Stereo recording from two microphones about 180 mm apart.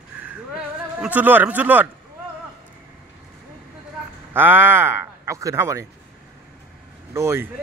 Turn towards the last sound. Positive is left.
turn(degrees=-15)  # may be behind; listen again after turning